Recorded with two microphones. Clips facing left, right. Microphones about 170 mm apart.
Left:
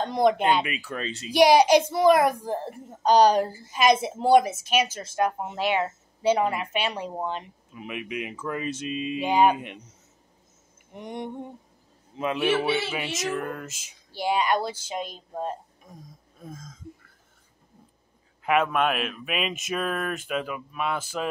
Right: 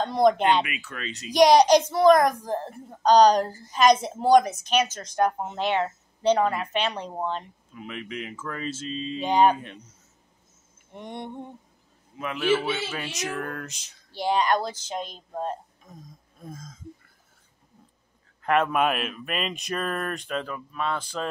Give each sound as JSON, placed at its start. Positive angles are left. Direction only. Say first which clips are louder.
{"t": 0.0, "sound": "speech", "louder": "right 1 dB", "side_deg": 15}
{"t": 0.7, "sound": "speech", "louder": "left 4 dB", "side_deg": 35}
{"t": 1.3, "sound": "speech", "louder": "right 1 dB", "side_deg": 5}
{"t": 11.0, "sound": "a man's voice", "louder": "left 2 dB", "side_deg": 10}
{"t": 13.1, "sound": "speech", "louder": "left 2 dB", "side_deg": 0}
{"t": 18.4, "sound": "speech", "louder": "even", "side_deg": 5}